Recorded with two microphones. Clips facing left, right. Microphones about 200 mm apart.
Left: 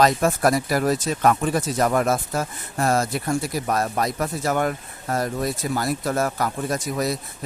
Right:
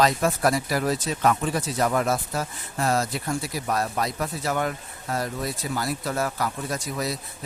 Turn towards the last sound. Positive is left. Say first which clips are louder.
# left 5 dB
turn(degrees=50)  # may be behind; listen again after turning